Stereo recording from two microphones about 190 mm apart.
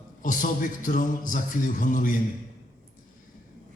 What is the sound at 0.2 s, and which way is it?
A man's voice, 45° left (ahead or behind).